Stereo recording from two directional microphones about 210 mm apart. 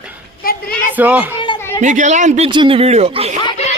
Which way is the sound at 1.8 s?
35° right (ahead or behind).